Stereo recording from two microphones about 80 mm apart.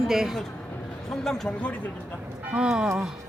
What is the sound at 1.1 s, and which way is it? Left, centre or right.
Speech, centre.